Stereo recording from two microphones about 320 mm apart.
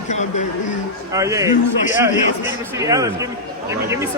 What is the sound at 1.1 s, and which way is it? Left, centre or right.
Speech, centre.